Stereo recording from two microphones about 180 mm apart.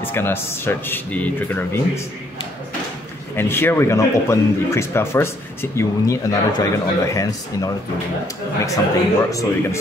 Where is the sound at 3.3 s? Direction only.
10° left (ahead or behind).